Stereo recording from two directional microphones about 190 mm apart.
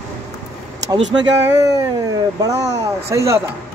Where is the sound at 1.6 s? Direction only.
20° right (ahead or behind).